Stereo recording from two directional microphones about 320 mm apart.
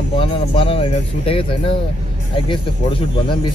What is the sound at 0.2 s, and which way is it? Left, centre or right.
Speech, centre.